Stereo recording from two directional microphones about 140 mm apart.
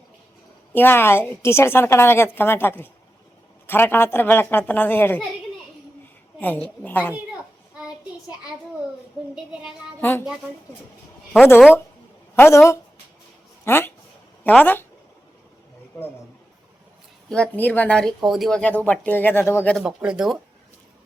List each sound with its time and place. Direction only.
0.7 s speech: 15° left (ahead or behind)
6.4 s speech: 10° left (ahead or behind)
9.3 s speech: 5° right (ahead or behind)
10.0 s speech: 15° left (ahead or behind)
12.4 s a woman's voice: 20° left (ahead or behind)
17.2 s speech: 5° left (ahead or behind)
19.7 s speech: 5° right (ahead or behind)